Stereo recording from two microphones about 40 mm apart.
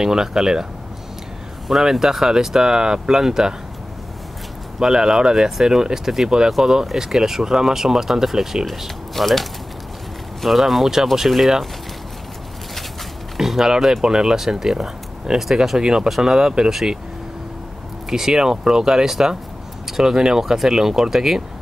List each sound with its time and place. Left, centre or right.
0.0 s speech: centre
1.7 s speech: centre
4.7 s speech: centre
13.4 s speech: centre
15.8 s speech: centre
18.1 s speech: centre